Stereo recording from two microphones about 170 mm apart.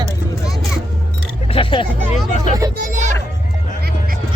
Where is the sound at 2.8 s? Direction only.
45° right (ahead or behind).